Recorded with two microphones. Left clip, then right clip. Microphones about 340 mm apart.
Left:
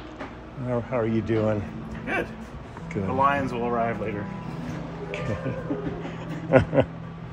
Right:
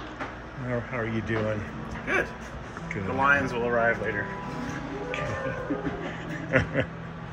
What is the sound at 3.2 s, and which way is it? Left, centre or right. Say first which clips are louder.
Speech: right 1 dB; left.